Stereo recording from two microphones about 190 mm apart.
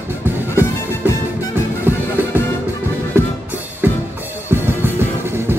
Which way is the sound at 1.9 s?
10° right (ahead or behind).